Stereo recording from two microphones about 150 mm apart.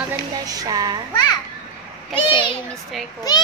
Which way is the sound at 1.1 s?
30° left (ahead or behind).